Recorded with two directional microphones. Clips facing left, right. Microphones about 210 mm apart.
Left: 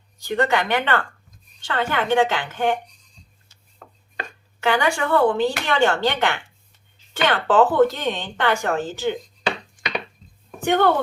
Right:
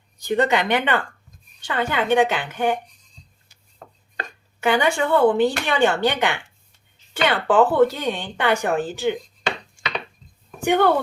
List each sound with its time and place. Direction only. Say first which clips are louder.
0.2 s speech: right 1 dB; 20° right (ahead or behind)
3.8 s chopping: right 2 dB; 35° right (ahead or behind)
4.6 s speech: right 1 dB; 20° right (ahead or behind)
10.6 s speech: right 1 dB; 10° right (ahead or behind)